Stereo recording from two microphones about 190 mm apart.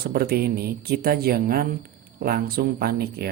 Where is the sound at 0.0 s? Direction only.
55° right (ahead or behind).